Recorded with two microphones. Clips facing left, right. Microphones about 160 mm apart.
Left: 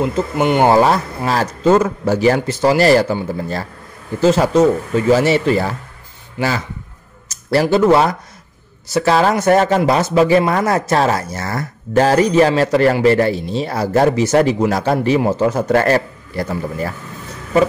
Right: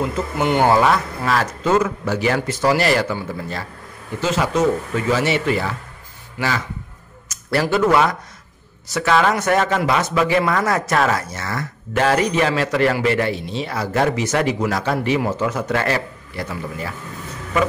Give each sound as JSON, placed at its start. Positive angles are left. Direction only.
{"t": 0.0, "sound": "speech", "side_deg": 20}
{"t": 0.7, "sound": "speech", "side_deg": 35}
{"t": 4.2, "sound": "speech", "side_deg": 35}
{"t": 7.7, "sound": "speech", "side_deg": 30}